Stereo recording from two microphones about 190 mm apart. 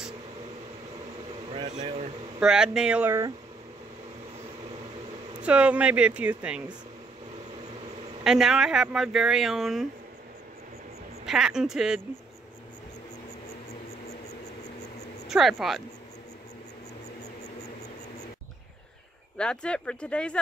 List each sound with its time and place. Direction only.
1.5 s a sound: 35° right (ahead or behind)
2.4 s speech: 5° right (ahead or behind)
5.4 s speech: 5° right (ahead or behind)
8.2 s speech: 5° right (ahead or behind)
11.2 s speech: 5° right (ahead or behind)
15.2 s speech: centre (ahead or behind)
19.3 s speech: 5° left (ahead or behind)